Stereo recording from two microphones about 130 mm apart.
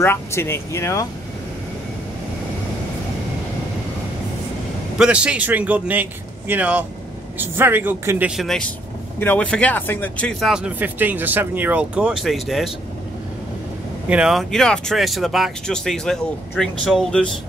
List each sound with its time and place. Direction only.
0.0 s speech: 20° left (ahead or behind)
4.9 s speech: 10° right (ahead or behind)
8.4 s speech: 5° left (ahead or behind)
10.4 s speech: 5° right (ahead or behind)
14.0 s speech: 5° right (ahead or behind)